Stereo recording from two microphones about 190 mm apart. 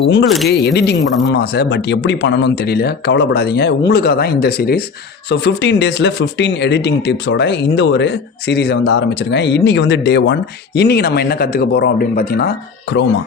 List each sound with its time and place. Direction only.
0.0 s speech: 65° left (ahead or behind)
0.3 s speech: centre (ahead or behind)
0.5 s speech: 60° left (ahead or behind)